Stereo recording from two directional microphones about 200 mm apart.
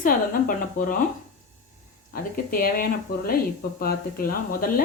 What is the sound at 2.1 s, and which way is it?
Speech, 45° left (ahead or behind).